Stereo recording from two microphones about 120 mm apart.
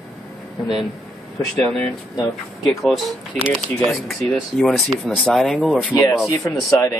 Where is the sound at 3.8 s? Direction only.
Centre (ahead or behind).